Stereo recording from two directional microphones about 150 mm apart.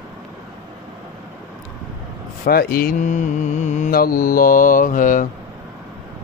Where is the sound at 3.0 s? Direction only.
55° left (ahead or behind).